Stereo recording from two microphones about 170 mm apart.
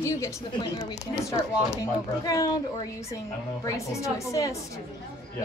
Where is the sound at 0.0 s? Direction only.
20° left (ahead or behind).